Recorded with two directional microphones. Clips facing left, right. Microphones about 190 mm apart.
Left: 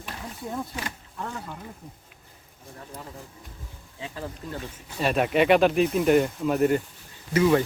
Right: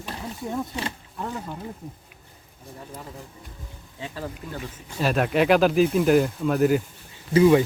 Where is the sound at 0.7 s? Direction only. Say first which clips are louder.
Right 4 dB; 25° right (ahead or behind).